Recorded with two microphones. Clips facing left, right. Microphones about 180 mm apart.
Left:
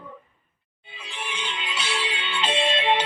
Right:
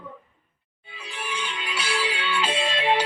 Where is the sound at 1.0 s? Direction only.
25° left (ahead or behind).